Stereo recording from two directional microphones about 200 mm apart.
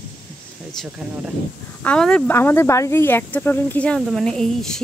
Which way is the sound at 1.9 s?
5° left (ahead or behind).